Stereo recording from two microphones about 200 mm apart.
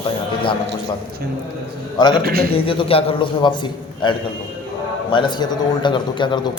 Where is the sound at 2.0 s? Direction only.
20° left (ahead or behind).